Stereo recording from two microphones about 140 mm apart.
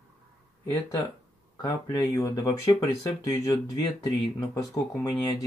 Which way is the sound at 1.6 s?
25° left (ahead or behind).